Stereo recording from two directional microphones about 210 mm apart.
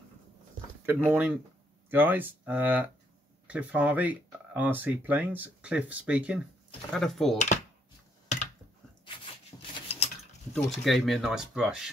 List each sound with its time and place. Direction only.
1.0 s speech: 5° right (ahead or behind)
7.3 s speech: 35° left (ahead or behind)
9.0 s a sound: 25° left (ahead or behind)
10.5 s speech: centre (ahead or behind)